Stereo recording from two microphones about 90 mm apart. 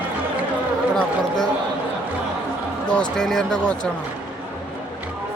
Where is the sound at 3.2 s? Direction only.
5° left (ahead or behind).